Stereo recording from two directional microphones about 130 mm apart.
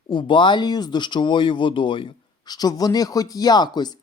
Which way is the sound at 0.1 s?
40° left (ahead or behind).